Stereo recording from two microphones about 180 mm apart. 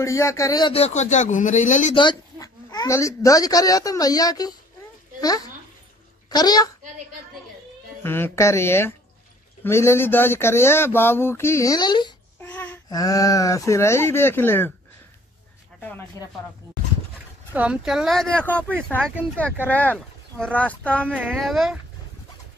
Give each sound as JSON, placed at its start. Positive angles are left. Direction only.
{"t": 0.0, "sound": "a man's voice", "side_deg": 15}
{"t": 2.0, "sound": "a child's voice", "side_deg": 20}
{"t": 8.0, "sound": "speech", "side_deg": 15}
{"t": 12.4, "sound": "babbling", "side_deg": 10}
{"t": 12.9, "sound": "speech", "side_deg": 20}
{"t": 17.6, "sound": "speech", "side_deg": -5}
{"t": 21.1, "sound": "speech", "side_deg": -5}